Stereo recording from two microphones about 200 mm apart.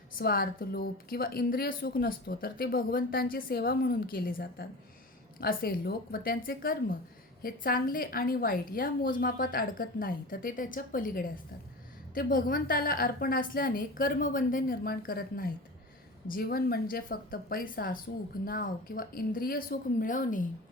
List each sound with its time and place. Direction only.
0.1 s a woman's voice: 45° left (ahead or behind)